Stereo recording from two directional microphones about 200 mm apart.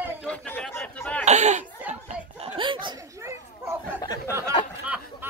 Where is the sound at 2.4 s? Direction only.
25° right (ahead or behind).